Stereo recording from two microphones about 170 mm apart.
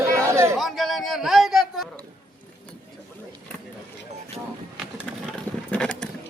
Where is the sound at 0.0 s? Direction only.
15° right (ahead or behind).